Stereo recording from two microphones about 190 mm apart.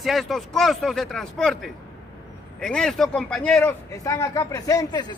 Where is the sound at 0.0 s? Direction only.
Centre (ahead or behind).